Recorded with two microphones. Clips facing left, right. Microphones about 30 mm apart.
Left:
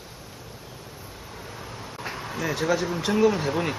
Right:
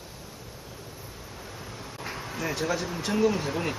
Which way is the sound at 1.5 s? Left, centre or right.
Centre.